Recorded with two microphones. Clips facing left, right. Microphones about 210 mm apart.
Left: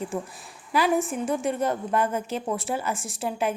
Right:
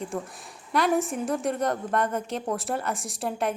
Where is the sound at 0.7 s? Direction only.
Centre (ahead or behind).